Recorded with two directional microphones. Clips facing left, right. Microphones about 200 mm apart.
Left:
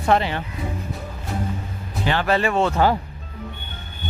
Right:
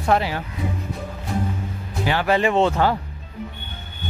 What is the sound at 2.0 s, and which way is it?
Speech, 10° right (ahead or behind).